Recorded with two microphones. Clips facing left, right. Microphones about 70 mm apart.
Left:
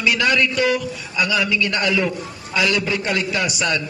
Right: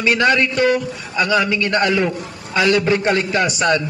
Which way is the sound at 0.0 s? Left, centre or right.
Right.